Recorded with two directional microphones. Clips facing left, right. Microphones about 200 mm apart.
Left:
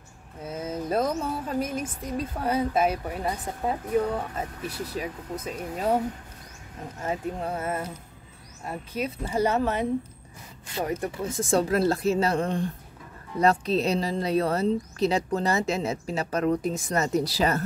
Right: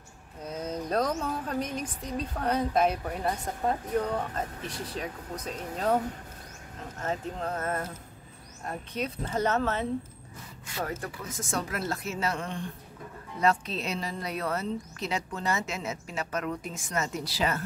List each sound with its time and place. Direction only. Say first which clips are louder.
0.4 s speech: left 2 dB; 5° left (ahead or behind)
7.0 s speech: left 3 dB; 10° left (ahead or behind); by 17.6 s 40° left (ahead or behind)